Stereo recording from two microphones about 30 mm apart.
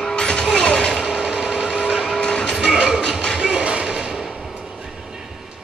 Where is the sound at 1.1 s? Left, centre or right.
Right.